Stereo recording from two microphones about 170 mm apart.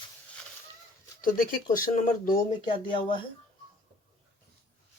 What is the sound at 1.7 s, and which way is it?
Speech, 50° left (ahead or behind).